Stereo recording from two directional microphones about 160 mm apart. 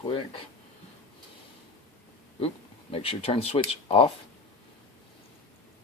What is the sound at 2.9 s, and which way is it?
Speech, 35° left (ahead or behind).